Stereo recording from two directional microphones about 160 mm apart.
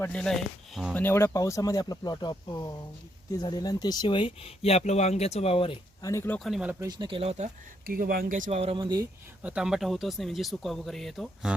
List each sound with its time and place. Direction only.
0.0 s speech: 5° left (ahead or behind)
0.9 s speech: 15° left (ahead or behind); by 5.7 s 35° left (ahead or behind)
6.0 s speech: 20° left (ahead or behind)
6.4 s speech: 5° right (ahead or behind)
6.7 s speech: 25° right (ahead or behind)
7.2 s speech: 45° right (ahead or behind)
7.9 s speech: 65° right (ahead or behind); by 9.0 s 30° right (ahead or behind)
9.4 s speech: 5° right (ahead or behind)